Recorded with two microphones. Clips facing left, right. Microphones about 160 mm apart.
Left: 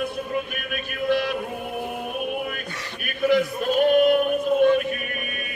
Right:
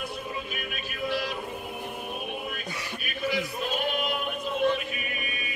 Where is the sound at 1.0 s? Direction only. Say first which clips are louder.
Left 7 dB; 55° left (ahead or behind).